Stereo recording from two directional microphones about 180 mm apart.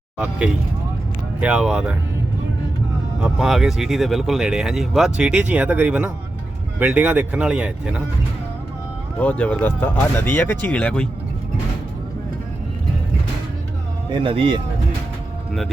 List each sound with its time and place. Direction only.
0.2 s speech: 5° right (ahead or behind)
3.2 s speech: centre (ahead or behind)
9.1 s speech: 5° left (ahead or behind)
14.1 s speech: 30° right (ahead or behind)